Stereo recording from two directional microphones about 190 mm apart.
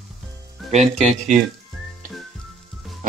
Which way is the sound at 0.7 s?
35° right (ahead or behind).